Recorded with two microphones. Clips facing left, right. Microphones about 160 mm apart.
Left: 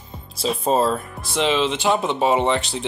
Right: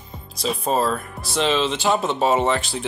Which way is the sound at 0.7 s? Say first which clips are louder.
Left 2 dB; 25° left (ahead or behind).